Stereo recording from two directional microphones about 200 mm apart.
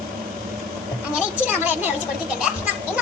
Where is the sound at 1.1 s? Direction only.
10° right (ahead or behind).